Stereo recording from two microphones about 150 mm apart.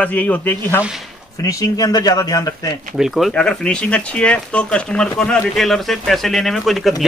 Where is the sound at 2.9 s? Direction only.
Centre (ahead or behind).